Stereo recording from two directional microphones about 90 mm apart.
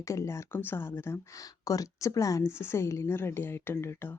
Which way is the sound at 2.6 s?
30° left (ahead or behind).